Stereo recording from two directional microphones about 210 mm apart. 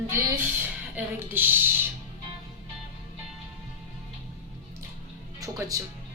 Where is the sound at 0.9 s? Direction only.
10° right (ahead or behind).